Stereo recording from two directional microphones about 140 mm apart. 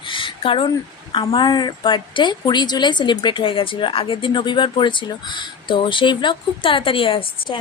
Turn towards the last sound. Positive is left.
turn(degrees=40)  # may be behind; listen again after turning